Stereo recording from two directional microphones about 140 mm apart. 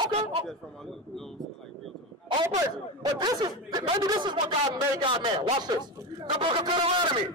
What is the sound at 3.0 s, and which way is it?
A man's voice, 25° right (ahead or behind).